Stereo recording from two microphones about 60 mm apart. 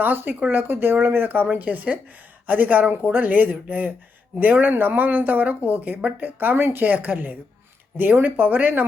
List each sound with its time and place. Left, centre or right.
0.0 s speech: right
0.7 s speech: right